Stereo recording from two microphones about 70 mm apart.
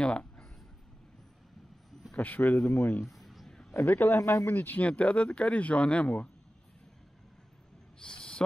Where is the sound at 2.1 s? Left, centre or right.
Left.